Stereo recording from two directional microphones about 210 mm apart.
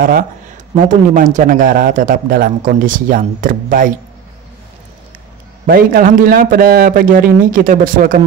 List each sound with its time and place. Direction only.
0.7 s a man's voice: 40° right (ahead or behind)
5.7 s a man's voice: 45° right (ahead or behind)